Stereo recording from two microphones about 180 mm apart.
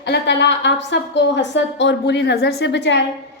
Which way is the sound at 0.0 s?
70° left (ahead or behind).